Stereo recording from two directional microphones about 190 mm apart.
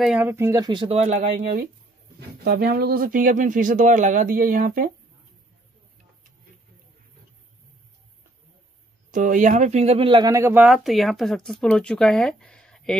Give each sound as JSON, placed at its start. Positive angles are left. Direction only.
{"t": 0.0, "sound": "speech", "side_deg": -5}
{"t": 2.1, "sound": "speech", "side_deg": -55}
{"t": 9.1, "sound": "speech", "side_deg": -45}